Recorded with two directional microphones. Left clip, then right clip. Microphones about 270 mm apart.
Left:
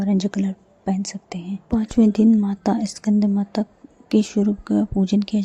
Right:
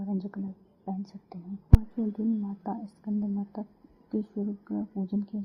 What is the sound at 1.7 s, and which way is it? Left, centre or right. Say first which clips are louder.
A woman's voice: left 16 dB; left.